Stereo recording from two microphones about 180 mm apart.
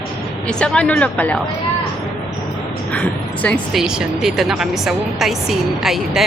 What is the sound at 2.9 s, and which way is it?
Speech, 5° left (ahead or behind).